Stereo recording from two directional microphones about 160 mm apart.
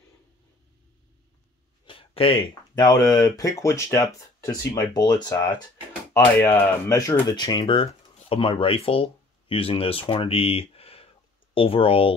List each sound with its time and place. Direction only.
1.9 s speech: 35° left (ahead or behind)